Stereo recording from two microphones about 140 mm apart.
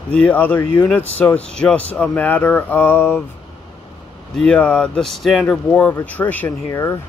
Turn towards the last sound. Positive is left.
turn(degrees=20)  # may be behind; listen again after turning